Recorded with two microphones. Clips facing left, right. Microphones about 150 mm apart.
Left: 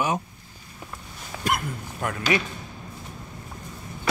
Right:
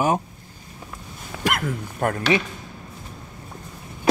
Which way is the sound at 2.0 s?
50° right (ahead or behind).